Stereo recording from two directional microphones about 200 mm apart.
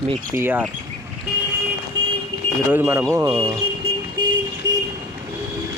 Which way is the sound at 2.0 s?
70° right (ahead or behind).